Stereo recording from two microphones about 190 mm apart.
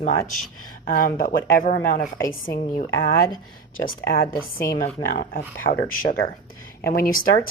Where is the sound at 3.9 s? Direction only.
50° left (ahead or behind).